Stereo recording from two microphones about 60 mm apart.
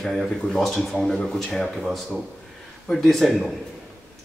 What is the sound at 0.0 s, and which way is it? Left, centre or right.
Speech, centre.